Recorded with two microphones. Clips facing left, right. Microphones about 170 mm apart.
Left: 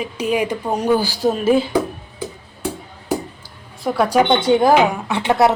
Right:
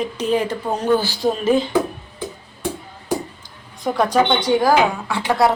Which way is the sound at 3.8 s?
5° left (ahead or behind).